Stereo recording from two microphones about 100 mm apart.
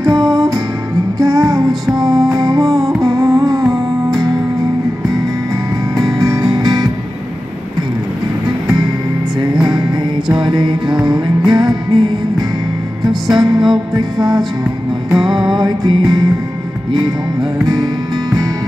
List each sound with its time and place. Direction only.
1.2 s music: 35° right (ahead or behind)
2.6 s music: centre (ahead or behind)
3.0 s music: 35° right (ahead or behind)
5.9 s music: 35° right (ahead or behind)
9.6 s music: 45° right (ahead or behind)
15.0 s music: 40° right (ahead or behind)